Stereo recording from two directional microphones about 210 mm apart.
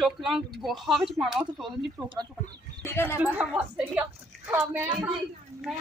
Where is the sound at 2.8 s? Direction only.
10° left (ahead or behind).